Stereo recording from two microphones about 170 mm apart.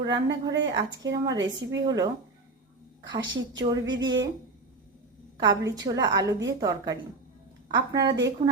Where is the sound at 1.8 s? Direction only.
20° right (ahead or behind).